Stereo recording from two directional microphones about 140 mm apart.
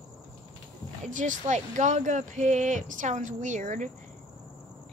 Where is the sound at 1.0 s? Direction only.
60° right (ahead or behind).